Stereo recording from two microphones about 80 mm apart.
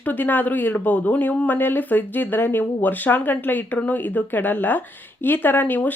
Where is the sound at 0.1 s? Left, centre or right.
Left.